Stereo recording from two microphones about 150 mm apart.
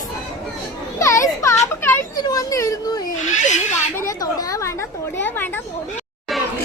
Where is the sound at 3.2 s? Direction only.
55° left (ahead or behind).